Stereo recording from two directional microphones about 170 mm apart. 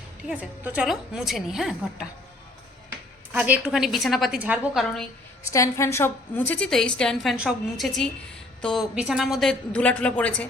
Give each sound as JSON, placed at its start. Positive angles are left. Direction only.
{"t": 0.3, "sound": "a woman's voice", "side_deg": -10}
{"t": 3.3, "sound": "a woman's voice", "side_deg": -10}
{"t": 5.5, "sound": "a woman's voice", "side_deg": 20}